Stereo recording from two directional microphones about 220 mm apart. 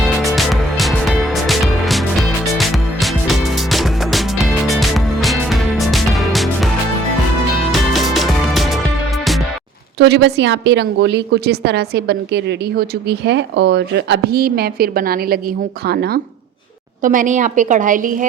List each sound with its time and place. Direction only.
0.0 s music: centre (ahead or behind)
10.0 s a woman's voice: 50° right (ahead or behind)